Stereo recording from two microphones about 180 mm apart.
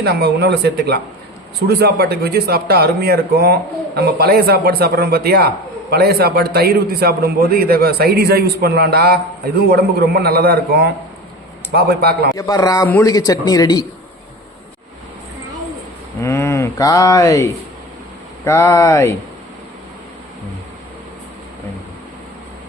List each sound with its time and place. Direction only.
0.0 s a man's voice: 65° right (ahead or behind)
12.4 s speech: 20° left (ahead or behind)
16.2 s speech: 15° left (ahead or behind)